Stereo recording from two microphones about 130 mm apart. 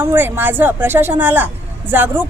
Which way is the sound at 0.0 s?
15° right (ahead or behind).